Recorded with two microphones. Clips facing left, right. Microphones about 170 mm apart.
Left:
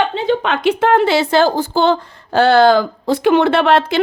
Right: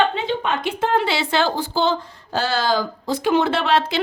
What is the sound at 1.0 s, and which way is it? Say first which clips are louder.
A woman's voice: left 8 dB; 45° left (ahead or behind).